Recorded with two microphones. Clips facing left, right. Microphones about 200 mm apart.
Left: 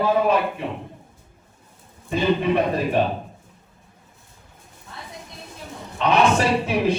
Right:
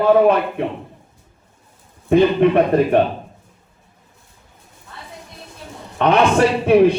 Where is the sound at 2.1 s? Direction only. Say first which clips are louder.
Right 7 dB; 60° right (ahead or behind).